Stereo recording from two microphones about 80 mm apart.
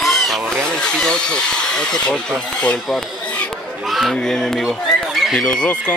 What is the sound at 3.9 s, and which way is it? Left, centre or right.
Speech, centre.